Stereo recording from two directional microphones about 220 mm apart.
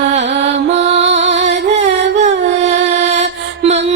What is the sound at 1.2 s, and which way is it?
Music, 55° right (ahead or behind).